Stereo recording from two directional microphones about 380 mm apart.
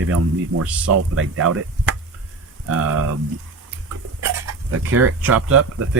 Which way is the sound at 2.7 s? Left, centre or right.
Right.